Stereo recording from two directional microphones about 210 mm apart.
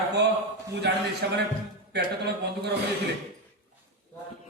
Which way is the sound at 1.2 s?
55° right (ahead or behind).